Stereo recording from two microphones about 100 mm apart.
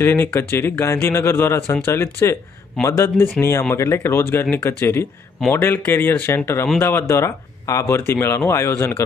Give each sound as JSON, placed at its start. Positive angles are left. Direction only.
{"t": 0.0, "sound": "speech", "side_deg": 25}